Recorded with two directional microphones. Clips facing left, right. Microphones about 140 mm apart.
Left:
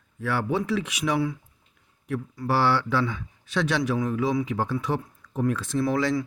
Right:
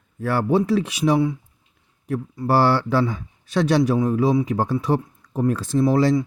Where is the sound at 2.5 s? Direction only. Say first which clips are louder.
Right 5 dB; 40° right (ahead or behind).